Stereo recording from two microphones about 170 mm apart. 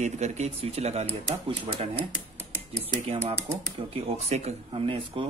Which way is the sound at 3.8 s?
35° right (ahead or behind).